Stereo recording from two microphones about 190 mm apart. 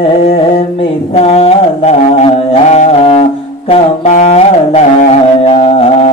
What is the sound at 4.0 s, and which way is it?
Music, 35° left (ahead or behind).